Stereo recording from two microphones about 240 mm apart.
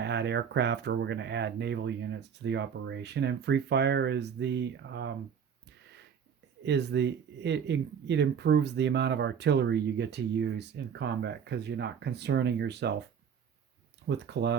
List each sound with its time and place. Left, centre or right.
0.0 s speech: right
6.6 s speech: right
14.1 s speech: right